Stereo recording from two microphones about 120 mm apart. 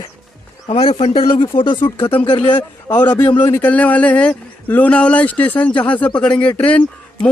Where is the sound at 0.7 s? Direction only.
50° left (ahead or behind).